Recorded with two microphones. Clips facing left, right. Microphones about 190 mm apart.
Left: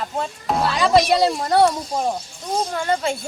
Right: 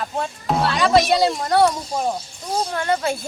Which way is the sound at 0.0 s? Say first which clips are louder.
Even; centre (ahead or behind).